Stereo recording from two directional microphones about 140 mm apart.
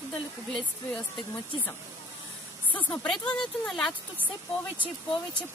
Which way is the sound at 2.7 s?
10° left (ahead or behind).